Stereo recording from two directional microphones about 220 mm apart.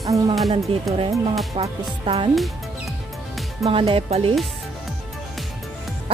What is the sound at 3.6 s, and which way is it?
Music, 25° right (ahead or behind).